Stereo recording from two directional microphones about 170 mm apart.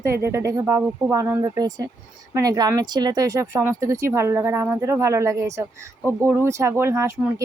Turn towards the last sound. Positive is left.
turn(degrees=-15)  # may be behind; listen again after turning